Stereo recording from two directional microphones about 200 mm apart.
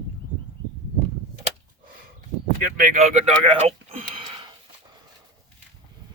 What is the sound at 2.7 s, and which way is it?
Speech, 40° right (ahead or behind).